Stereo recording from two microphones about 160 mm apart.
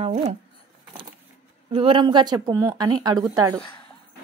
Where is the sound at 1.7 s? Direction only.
35° right (ahead or behind).